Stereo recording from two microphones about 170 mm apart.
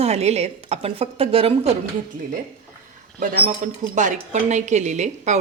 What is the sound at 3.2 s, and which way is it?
Speech, 55° right (ahead or behind).